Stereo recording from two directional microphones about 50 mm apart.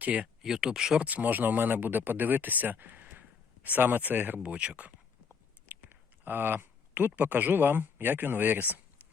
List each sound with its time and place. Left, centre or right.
0.0 s speech: right
0.4 s speech: centre
1.0 s speech: right
4.4 s speech: right
5.3 s a sound: right
7.2 s speech: right